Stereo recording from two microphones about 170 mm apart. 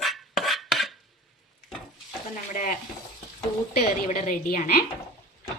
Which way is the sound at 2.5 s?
50° left (ahead or behind).